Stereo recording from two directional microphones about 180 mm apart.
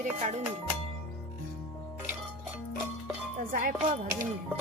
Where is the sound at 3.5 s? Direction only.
50° right (ahead or behind).